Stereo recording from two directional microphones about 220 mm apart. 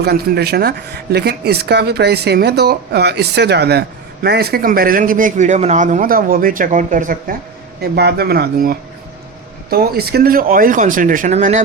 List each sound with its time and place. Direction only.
0.0 s speech: 45° right (ahead or behind)